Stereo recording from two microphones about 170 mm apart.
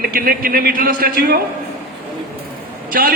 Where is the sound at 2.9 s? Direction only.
60° right (ahead or behind).